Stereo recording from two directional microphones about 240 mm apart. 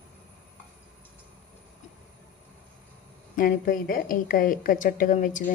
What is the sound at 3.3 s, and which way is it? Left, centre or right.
A woman's voice, left.